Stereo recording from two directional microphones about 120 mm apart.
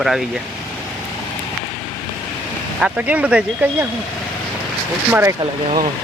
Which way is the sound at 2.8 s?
10° right (ahead or behind).